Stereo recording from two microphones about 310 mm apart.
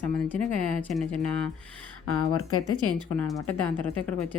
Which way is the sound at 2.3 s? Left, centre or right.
Left.